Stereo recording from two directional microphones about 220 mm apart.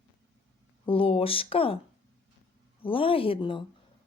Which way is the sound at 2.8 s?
25° left (ahead or behind).